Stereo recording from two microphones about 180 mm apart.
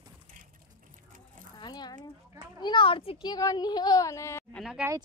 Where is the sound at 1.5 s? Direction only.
25° left (ahead or behind).